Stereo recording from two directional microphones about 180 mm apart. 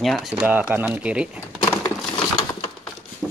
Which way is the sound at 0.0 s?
Centre (ahead or behind).